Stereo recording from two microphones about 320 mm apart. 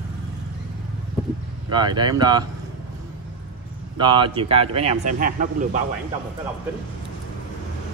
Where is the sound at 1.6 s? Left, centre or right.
Centre.